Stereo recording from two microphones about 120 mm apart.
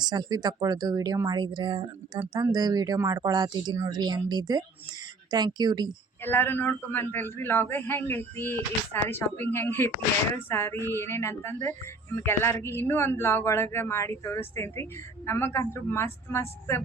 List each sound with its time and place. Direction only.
0.0 s speech: 35° right (ahead or behind)
6.2 s a man's voice: 15° left (ahead or behind)